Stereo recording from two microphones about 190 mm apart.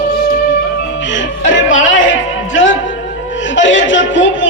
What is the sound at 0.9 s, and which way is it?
Music, 80° left.